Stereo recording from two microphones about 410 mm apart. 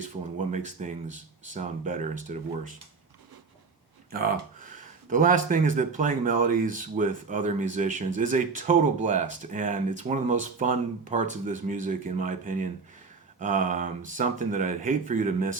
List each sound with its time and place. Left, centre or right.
0.0 s speech: centre
4.1 s speech: right